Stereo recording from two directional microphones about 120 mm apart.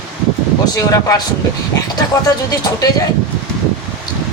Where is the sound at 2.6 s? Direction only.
30° left (ahead or behind).